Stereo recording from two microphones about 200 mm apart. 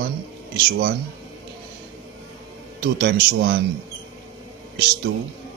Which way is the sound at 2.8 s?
55° right (ahead or behind).